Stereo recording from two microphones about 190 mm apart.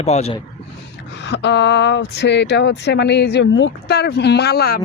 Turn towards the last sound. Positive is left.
turn(degrees=55)  # may be behind; listen again after turning